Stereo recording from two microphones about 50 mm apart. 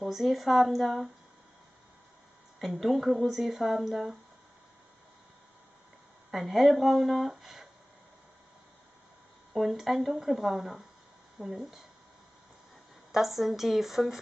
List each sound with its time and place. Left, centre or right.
0.1 s speech: centre
2.6 s speech: centre
6.3 s speech: centre
9.5 s speech: centre
13.1 s speech: centre